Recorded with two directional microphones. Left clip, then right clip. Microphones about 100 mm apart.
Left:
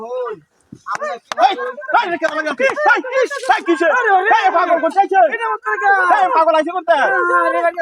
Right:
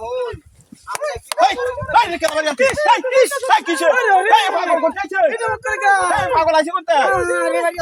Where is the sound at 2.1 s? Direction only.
35° right (ahead or behind).